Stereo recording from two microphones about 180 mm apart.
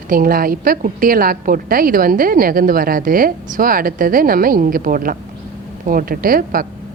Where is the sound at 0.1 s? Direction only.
55° right (ahead or behind).